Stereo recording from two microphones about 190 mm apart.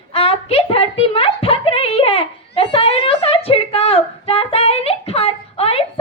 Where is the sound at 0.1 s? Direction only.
30° left (ahead or behind).